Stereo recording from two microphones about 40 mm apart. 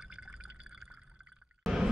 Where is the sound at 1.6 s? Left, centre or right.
Centre.